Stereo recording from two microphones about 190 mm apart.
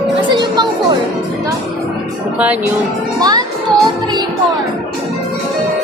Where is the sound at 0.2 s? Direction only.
25° right (ahead or behind).